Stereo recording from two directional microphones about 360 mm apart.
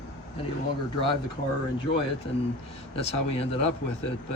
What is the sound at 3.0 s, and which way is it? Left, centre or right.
Speech, centre.